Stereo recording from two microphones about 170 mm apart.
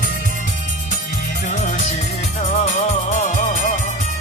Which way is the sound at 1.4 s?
45° left (ahead or behind).